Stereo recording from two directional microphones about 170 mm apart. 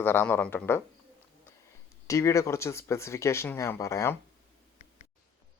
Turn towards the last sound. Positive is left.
turn(degrees=15)  # may be behind; listen again after turning